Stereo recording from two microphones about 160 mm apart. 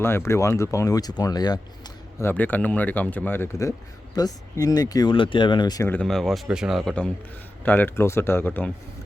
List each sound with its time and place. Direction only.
0.0 s speech: 15° left (ahead or behind)
2.2 s speech: 10° left (ahead or behind)
5.9 s speech: 5° left (ahead or behind)